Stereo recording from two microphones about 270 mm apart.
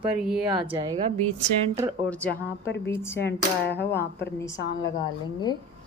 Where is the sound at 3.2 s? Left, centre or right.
Left.